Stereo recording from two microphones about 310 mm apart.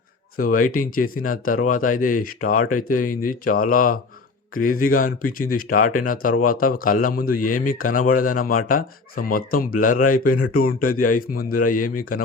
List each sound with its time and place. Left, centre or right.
0.3 s speech: left